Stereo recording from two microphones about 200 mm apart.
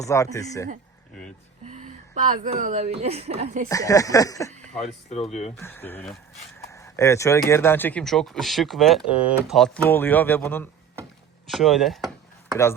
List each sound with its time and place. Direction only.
0.0 s speech: 15° left (ahead or behind)
1.7 s a woman's voice: 40° right (ahead or behind)
3.7 s speech: 15° left (ahead or behind)
4.8 s speech: 30° left (ahead or behind)
5.5 s speech: 10° left (ahead or behind)
11.4 s chop: centre (ahead or behind)